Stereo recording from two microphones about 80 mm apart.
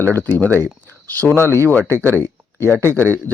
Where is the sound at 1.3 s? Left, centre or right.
Left.